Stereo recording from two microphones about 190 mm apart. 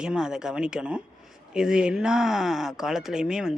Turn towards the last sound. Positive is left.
turn(degrees=-5)  # may be behind; listen again after turning